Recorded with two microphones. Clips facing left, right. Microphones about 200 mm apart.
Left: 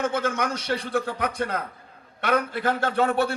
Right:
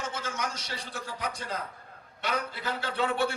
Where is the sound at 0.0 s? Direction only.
55° left (ahead or behind).